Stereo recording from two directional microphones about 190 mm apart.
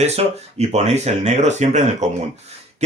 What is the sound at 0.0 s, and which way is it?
Speech, 35° right (ahead or behind).